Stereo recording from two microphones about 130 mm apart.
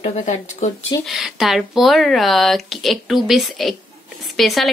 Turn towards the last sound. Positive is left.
turn(degrees=0)  # may be behind; listen again after turning